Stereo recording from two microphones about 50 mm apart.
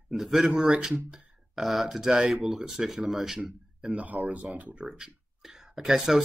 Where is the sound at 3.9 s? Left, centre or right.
Right.